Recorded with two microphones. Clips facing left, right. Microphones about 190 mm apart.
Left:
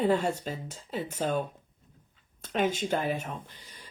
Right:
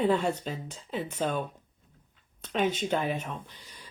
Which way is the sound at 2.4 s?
45° left (ahead or behind).